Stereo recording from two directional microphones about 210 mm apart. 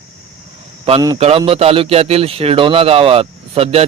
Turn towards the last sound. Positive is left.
turn(degrees=-30)  # may be behind; listen again after turning